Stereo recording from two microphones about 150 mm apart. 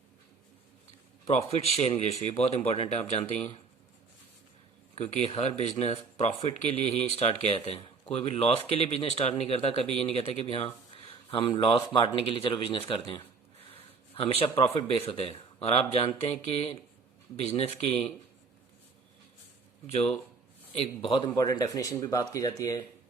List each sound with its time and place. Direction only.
1.3 s speech: 45° left (ahead or behind)
4.9 s speech: 45° left (ahead or behind)
19.9 s speech: 45° left (ahead or behind); by 22.8 s 25° left (ahead or behind)